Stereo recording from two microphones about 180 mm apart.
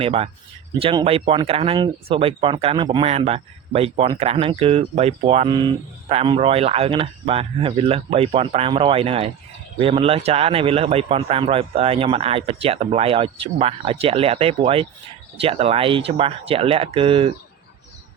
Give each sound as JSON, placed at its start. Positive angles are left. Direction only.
{"t": 0.0, "sound": "speech", "side_deg": -35}